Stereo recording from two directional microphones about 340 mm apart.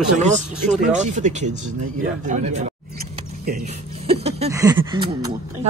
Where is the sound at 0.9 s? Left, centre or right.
Right.